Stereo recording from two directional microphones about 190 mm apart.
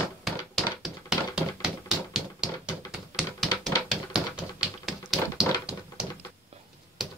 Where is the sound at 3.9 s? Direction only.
5° right (ahead or behind).